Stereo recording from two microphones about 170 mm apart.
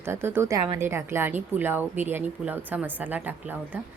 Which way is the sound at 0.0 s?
15° right (ahead or behind).